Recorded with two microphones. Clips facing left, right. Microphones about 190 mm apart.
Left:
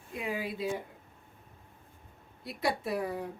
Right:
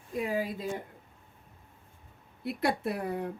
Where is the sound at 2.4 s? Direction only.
55° right (ahead or behind).